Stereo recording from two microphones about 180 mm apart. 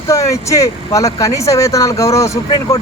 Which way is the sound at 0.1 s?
15° left (ahead or behind).